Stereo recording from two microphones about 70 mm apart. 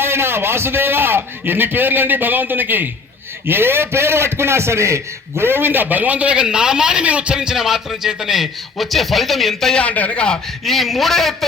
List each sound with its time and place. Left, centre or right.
0.0 s a man's voice: right; by 9.8 s centre
9.8 s a man's voice: centre